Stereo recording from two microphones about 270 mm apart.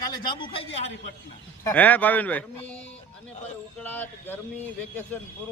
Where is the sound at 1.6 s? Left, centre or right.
Centre.